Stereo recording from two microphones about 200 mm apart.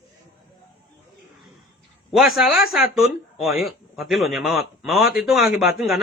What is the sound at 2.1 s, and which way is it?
Speech, centre (ahead or behind).